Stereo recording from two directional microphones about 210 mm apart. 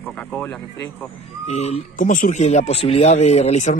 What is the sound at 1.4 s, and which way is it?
Speech, 30° left (ahead or behind).